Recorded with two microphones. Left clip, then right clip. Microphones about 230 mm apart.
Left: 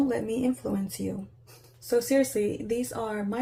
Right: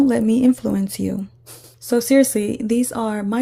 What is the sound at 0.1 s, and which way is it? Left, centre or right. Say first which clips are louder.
A woman's voice: right 11 dB; right.